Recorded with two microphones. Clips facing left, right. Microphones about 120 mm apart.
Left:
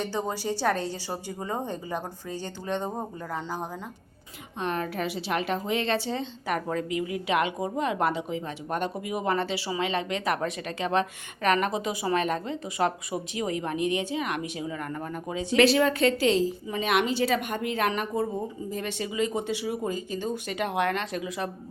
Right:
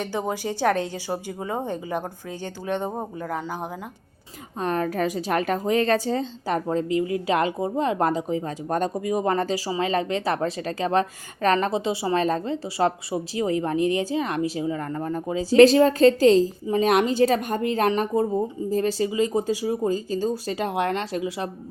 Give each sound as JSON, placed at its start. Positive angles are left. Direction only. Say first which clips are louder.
{"t": 0.0, "sound": "a woman's voice", "louder": "right 3 dB", "side_deg": -15}
{"t": 4.6, "sound": "a woman's voice", "louder": "right 5 dB", "side_deg": -40}